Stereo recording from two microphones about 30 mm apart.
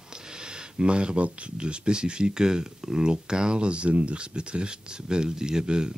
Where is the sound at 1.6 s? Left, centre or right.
Right.